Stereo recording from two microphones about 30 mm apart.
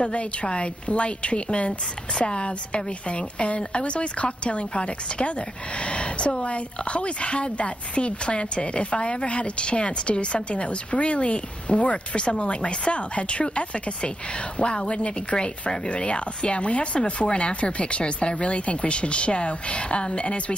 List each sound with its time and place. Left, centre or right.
0.1 s a woman's voice: left